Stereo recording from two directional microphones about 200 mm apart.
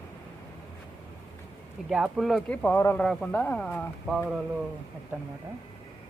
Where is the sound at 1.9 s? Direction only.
Centre (ahead or behind).